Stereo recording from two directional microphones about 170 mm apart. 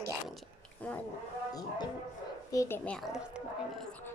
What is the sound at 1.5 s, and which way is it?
Speech, 20° left (ahead or behind).